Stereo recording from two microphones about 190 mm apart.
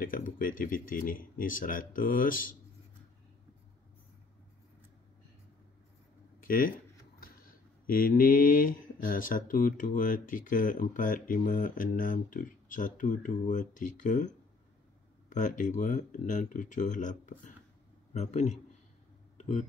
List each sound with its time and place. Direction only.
0.0 s speech: 45° left (ahead or behind)
6.4 s speech: 50° left (ahead or behind)
19.3 s a sound: 35° left (ahead or behind)